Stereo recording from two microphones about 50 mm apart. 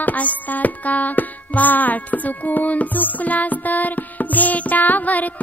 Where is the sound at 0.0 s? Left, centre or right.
Left.